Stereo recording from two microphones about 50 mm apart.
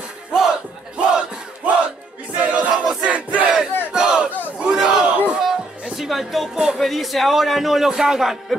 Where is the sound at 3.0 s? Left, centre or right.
Right.